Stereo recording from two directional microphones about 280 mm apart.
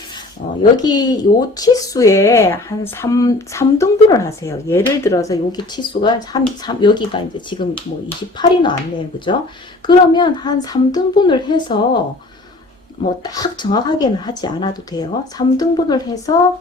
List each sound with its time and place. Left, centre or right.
0.8 s speech: centre
9.8 s speech: centre
13.2 s speech: centre